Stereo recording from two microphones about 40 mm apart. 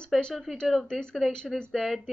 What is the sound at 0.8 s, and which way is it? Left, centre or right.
Speech, left.